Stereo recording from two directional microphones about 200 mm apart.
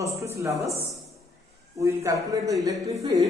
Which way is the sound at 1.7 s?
15° right (ahead or behind).